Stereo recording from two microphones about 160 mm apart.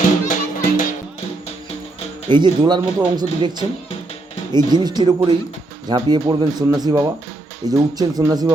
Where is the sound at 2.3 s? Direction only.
30° right (ahead or behind).